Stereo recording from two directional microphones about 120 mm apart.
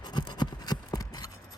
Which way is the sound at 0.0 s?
40° left (ahead or behind).